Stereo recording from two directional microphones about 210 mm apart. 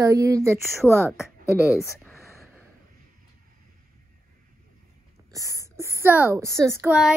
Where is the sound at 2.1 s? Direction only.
10° left (ahead or behind).